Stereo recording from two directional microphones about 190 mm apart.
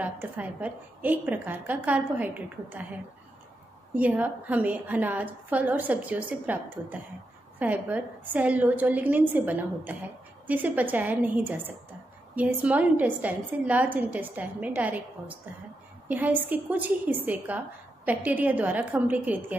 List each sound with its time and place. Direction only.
0.0 s a woman's voice: 10° right (ahead or behind)